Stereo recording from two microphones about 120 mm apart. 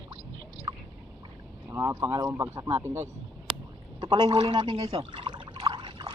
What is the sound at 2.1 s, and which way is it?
Speech, 30° right (ahead or behind).